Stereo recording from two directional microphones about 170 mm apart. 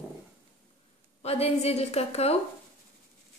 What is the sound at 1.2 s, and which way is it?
A woman's voice, 35° left (ahead or behind).